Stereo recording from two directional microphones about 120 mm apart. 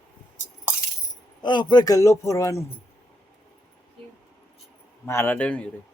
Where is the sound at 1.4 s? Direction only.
40° left (ahead or behind).